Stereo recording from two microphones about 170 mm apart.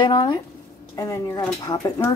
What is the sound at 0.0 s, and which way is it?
Speech, 25° left (ahead or behind).